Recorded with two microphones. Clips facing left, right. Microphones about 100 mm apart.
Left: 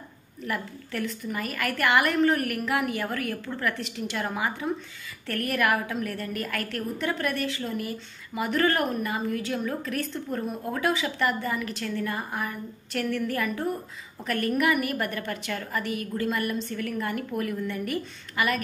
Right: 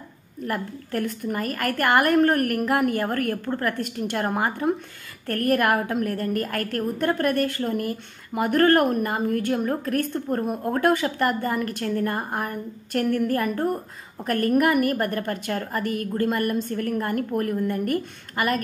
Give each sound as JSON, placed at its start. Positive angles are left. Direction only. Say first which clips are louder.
{"t": 0.5, "sound": "a woman's voice", "louder": "right 4 dB", "side_deg": -50}